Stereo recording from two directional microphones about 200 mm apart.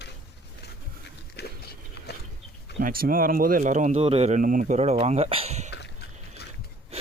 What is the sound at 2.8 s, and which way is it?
Speech, 45° right (ahead or behind).